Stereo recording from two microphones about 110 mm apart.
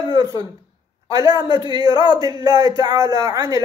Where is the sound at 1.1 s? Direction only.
35° right (ahead or behind).